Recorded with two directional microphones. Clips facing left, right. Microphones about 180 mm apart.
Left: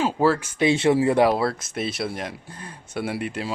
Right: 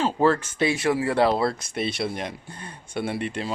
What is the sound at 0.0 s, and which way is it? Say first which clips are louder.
Speech: even; 10° left (ahead or behind).